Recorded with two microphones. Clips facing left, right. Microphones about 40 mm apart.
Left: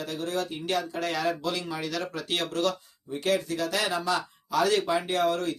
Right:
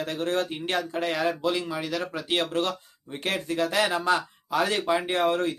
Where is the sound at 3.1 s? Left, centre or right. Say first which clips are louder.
Left 1 dB; right.